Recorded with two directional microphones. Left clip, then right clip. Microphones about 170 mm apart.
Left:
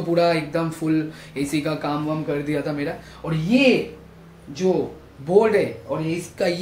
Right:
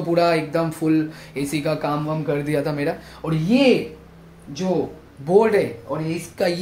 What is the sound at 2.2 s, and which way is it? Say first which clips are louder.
Speech: right 2 dB; 45° right (ahead or behind).